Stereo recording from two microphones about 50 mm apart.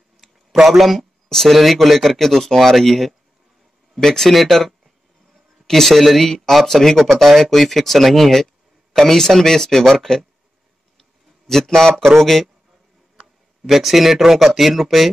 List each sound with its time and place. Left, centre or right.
0.6 s speech: centre
11.0 s a sound: centre
12.1 s speech: centre